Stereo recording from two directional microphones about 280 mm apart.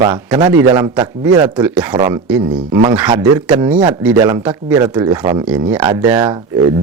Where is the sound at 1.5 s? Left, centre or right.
Centre.